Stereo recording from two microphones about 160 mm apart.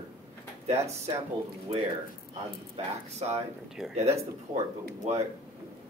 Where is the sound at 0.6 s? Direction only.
40° right (ahead or behind).